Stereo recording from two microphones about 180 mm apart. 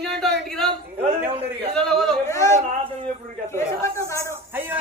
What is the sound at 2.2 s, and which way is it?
Speech, 15° left (ahead or behind).